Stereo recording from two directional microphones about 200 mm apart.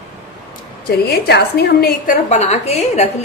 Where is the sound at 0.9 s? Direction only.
55° left (ahead or behind).